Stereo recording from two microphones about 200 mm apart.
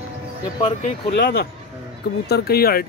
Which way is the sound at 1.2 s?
55° left (ahead or behind).